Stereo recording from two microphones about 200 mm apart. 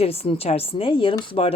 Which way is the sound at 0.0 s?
30° left (ahead or behind).